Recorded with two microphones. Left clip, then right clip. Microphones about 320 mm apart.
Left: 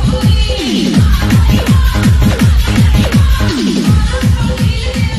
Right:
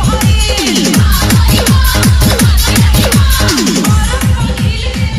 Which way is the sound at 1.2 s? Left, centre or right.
Right.